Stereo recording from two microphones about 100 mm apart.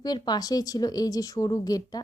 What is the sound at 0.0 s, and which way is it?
Speech, 40° left (ahead or behind).